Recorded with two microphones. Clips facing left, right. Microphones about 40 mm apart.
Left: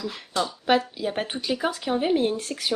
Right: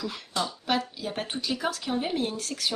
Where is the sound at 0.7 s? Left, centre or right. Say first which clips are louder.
Left 6 dB; centre.